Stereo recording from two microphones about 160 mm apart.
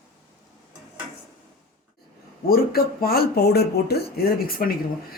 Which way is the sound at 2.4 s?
70° left (ahead or behind).